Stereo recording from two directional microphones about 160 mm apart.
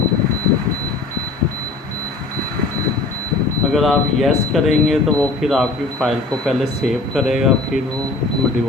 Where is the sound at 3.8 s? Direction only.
Centre (ahead or behind).